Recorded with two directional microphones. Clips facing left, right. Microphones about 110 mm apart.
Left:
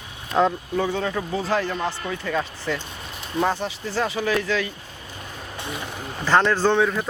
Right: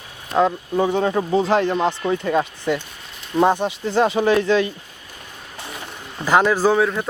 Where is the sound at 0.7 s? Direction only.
20° right (ahead or behind).